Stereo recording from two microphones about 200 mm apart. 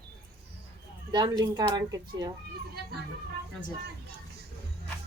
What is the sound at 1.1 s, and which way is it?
Speech, 20° right (ahead or behind).